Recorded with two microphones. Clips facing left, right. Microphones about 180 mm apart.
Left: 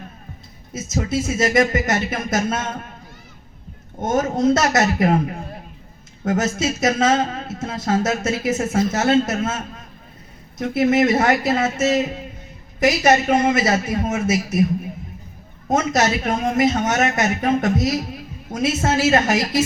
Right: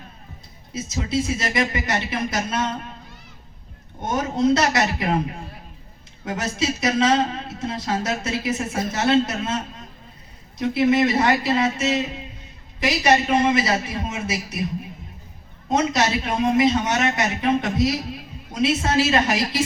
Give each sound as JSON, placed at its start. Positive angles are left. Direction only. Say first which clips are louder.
{"t": 0.7, "sound": "speech", "louder": "left 2 dB", "side_deg": 45}
{"t": 4.0, "sound": "speech", "louder": "left 3 dB", "side_deg": 45}
{"t": 6.2, "sound": "speech", "louder": "left 4 dB", "side_deg": 45}
{"t": 10.6, "sound": "speech", "louder": "left 1 dB", "side_deg": 45}
{"t": 15.7, "sound": "speech", "louder": "left 2 dB", "side_deg": 45}